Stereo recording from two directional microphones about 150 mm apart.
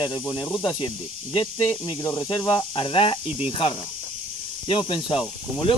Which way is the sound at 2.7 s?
35° left (ahead or behind).